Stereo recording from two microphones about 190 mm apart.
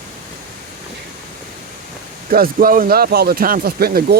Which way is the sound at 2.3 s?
50° right (ahead or behind).